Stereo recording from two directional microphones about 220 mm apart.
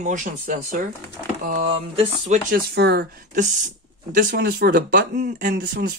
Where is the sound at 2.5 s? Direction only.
50° right (ahead or behind).